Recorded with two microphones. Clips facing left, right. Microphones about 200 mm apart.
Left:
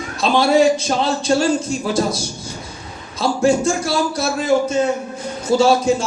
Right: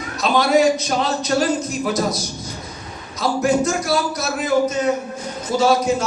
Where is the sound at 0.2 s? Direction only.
30° left (ahead or behind).